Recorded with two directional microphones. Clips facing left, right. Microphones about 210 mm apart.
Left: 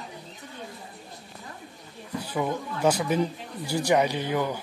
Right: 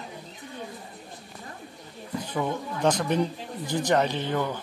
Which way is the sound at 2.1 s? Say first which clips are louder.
Even; 10° left (ahead or behind).